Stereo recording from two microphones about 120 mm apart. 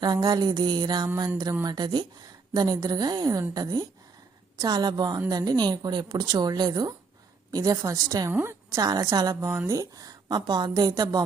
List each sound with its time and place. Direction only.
0.0 s a woman's voice: 35° right (ahead or behind)